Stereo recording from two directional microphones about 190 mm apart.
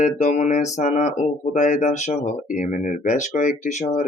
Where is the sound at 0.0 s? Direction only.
40° left (ahead or behind).